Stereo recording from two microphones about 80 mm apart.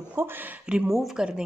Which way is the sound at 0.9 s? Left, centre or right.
Centre.